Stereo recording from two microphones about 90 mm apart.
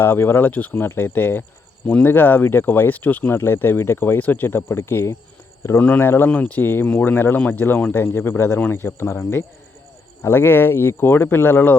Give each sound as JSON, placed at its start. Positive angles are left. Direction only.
{"t": 0.0, "sound": "speech", "side_deg": 25}
{"t": 5.8, "sound": "speech", "side_deg": 15}